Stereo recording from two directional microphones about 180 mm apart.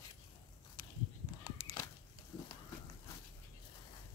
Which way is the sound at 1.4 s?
20° left (ahead or behind).